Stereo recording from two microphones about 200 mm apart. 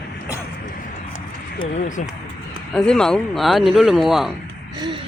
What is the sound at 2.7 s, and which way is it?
Speech, 5° left (ahead or behind).